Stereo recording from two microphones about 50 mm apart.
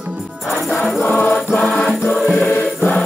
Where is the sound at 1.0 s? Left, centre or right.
Left.